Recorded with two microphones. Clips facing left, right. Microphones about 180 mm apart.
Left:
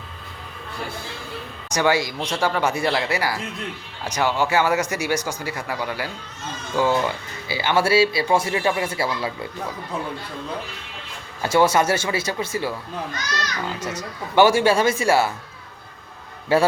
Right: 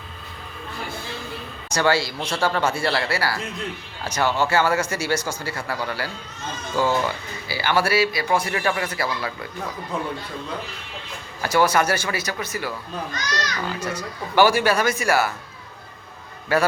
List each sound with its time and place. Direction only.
1.7 s speech: 15° left (ahead or behind)
11.4 s speech: 25° left (ahead or behind)
16.5 s speech: 30° left (ahead or behind)